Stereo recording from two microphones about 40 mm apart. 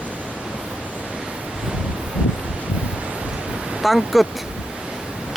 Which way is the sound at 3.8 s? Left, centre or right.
Centre.